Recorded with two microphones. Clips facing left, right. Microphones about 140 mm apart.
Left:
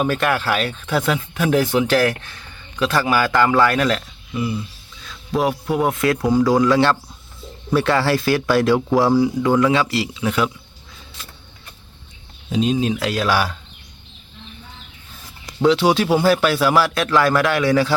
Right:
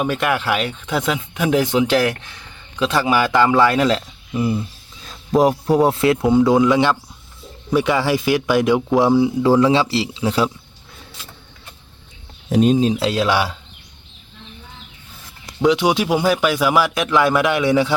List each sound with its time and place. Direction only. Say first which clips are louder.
0.0 s speech: even; 10° right (ahead or behind)
5.4 s a man's voice: right 5 dB; 35° right (ahead or behind)
12.5 s speech: right 4 dB; 50° right (ahead or behind)
12.8 s a man's voice: right 3 dB; 30° right (ahead or behind)
15.6 s speech: left 1 dB; 15° right (ahead or behind)